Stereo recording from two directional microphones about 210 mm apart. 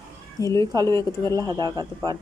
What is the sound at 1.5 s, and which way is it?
Speech, 20° right (ahead or behind).